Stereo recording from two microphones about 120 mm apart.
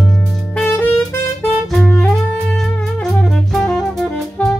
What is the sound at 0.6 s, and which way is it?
Saxophone, 15° left (ahead or behind).